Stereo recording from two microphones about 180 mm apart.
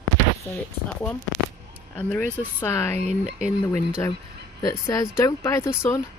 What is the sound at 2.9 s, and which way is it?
Speech, 40° right (ahead or behind).